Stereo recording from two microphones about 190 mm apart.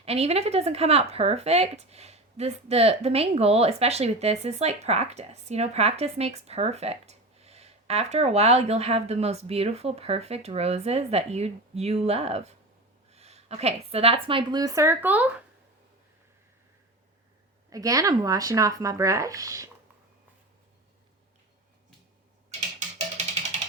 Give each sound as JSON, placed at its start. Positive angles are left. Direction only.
{"t": 0.0, "sound": "a woman's voice", "side_deg": -35}
{"t": 17.7, "sound": "speech", "side_deg": -15}